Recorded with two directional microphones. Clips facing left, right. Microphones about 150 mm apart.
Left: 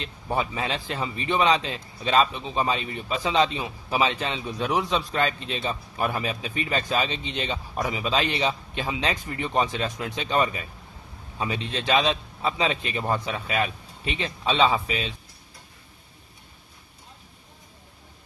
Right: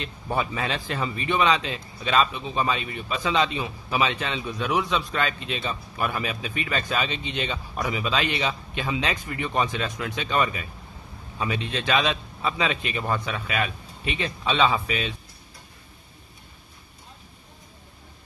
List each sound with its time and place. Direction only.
0.0 s a man's voice: 25° left (ahead or behind)